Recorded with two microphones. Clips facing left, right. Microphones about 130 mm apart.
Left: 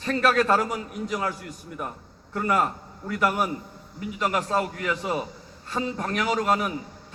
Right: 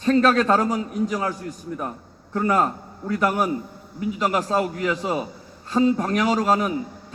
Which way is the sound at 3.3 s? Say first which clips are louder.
Right 4 dB; 5° right (ahead or behind).